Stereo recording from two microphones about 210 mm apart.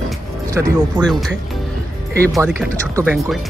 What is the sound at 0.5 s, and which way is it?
Speech, 15° right (ahead or behind).